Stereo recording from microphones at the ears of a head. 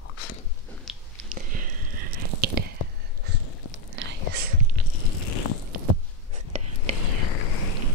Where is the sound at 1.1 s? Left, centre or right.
Right.